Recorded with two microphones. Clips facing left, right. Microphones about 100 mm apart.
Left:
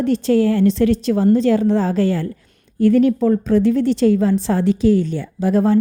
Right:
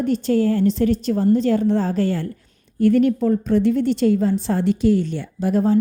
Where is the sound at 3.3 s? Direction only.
90° left.